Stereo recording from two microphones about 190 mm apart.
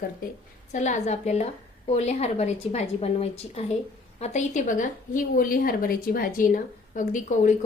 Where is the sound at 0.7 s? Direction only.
40° left (ahead or behind).